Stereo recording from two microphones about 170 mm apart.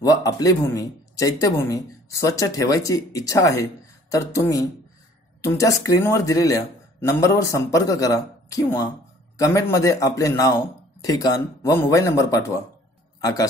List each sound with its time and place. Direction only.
0.0 s a man's voice: 20° left (ahead or behind)